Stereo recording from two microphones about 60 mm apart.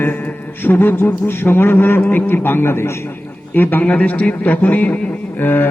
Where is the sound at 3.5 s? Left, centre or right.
Left.